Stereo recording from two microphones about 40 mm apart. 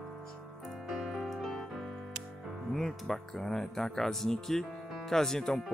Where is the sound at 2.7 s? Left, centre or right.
Centre.